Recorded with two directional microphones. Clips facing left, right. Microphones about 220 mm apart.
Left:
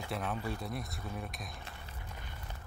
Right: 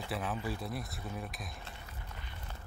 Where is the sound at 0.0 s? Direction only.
Centre (ahead or behind).